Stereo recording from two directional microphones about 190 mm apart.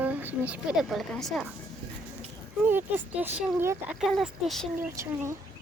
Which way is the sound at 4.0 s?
Centre (ahead or behind).